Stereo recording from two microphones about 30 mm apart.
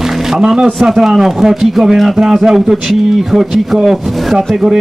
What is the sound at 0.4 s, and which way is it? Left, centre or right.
Speech, right.